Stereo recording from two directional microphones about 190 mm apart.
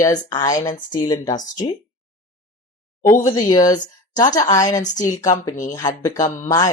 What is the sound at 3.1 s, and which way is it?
Speech, 20° left (ahead or behind).